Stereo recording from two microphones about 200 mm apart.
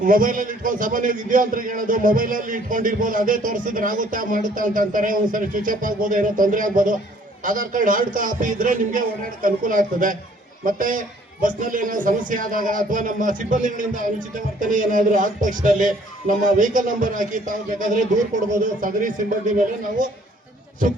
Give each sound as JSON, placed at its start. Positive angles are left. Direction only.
{"t": 0.0, "sound": "a man's voice", "side_deg": -40}